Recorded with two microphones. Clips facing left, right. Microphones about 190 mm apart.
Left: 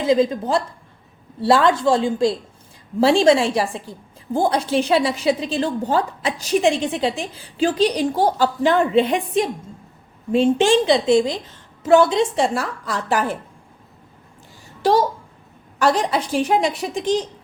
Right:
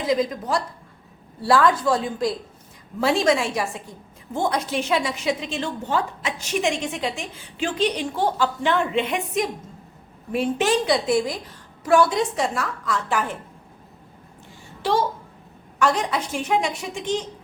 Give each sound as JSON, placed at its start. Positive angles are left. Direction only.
{"t": 0.0, "sound": "a woman's voice", "side_deg": 25}
{"t": 14.8, "sound": "a woman's voice", "side_deg": 40}